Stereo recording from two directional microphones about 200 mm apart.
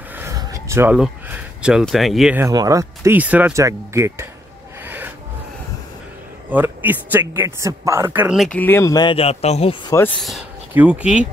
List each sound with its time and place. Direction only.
0.1 s speech: 15° right (ahead or behind)
4.8 s rub: 10° right (ahead or behind)
6.5 s speech: 10° right (ahead or behind)
8.5 s speech: 10° left (ahead or behind); by 9.8 s 30° left (ahead or behind)
9.8 s speech: 15° left (ahead or behind)
10.2 s speech: 5° right (ahead or behind)